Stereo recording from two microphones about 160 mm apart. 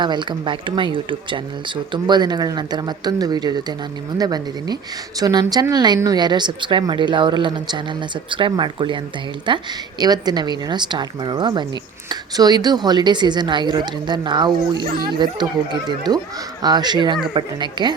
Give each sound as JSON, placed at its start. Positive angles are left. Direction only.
{"t": 0.0, "sound": "speech", "side_deg": -30}